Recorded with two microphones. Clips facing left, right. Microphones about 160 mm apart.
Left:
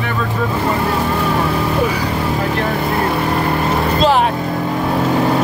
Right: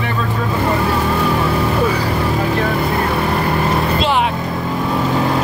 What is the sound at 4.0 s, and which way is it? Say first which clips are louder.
Vehicle: left 7 dB; 40° left (ahead or behind).